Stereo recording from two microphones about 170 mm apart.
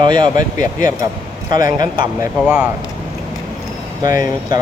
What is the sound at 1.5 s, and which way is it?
Speech, 25° right (ahead or behind).